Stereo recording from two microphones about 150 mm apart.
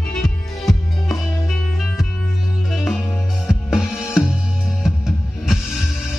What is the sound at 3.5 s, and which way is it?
Music, 5° right (ahead or behind).